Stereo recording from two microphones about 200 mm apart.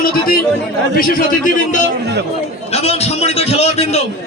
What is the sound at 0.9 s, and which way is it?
Speech, 45° left (ahead or behind).